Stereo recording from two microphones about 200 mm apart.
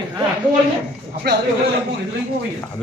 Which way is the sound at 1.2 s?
50° right (ahead or behind).